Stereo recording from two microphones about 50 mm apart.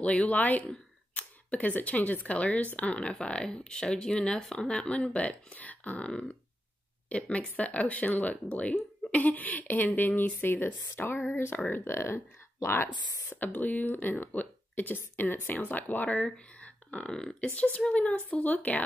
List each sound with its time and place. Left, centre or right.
0.0 s speech: left
11.0 s speech: left
11.3 s speech: left
13.4 s speech: left
16.3 s a sound: left
17.1 s speech: centre
17.8 s speech: left